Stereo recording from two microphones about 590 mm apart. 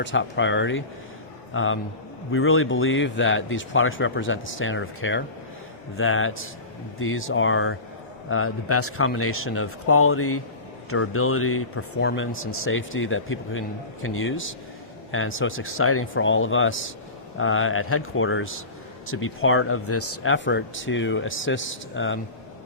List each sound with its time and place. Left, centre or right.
0.0 s speech: centre